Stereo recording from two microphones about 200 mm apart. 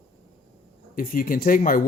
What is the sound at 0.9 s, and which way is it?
Speech, 45° left (ahead or behind).